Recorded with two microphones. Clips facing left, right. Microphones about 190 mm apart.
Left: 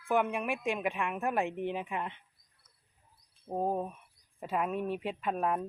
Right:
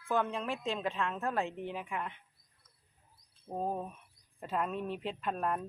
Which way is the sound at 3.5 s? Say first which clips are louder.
Left 4 dB; 20° left (ahead or behind).